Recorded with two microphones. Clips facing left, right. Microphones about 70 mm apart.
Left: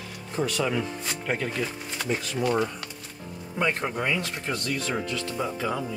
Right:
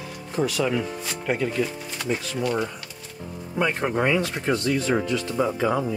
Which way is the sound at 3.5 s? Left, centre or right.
Centre.